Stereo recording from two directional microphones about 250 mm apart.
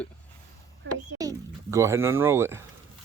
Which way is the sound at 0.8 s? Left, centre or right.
Right.